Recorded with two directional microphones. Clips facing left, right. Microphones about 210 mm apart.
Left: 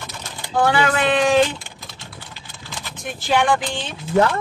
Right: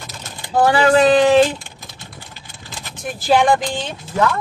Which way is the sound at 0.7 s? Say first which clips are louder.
Right 7 dB; 35° right (ahead or behind).